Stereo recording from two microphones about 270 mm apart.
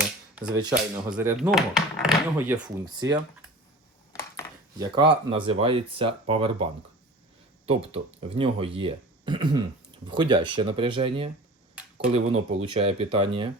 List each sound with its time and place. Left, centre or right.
0.0 s speech: centre
2.6 s speech: centre
4.1 s a sound: centre
5.5 s speech: right
7.7 s speech: right